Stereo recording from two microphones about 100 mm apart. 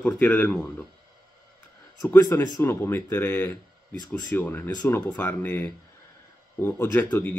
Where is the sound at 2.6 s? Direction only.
25° left (ahead or behind).